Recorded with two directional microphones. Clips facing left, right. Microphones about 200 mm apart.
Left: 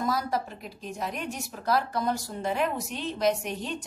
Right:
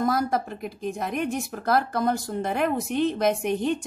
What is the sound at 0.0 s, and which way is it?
A woman's voice, 50° right (ahead or behind).